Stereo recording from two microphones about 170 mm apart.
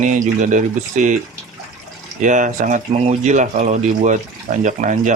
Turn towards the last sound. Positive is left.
turn(degrees=-45)  # may be behind; listen again after turning